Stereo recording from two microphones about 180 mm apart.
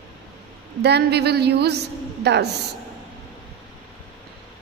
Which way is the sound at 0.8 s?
65° right (ahead or behind).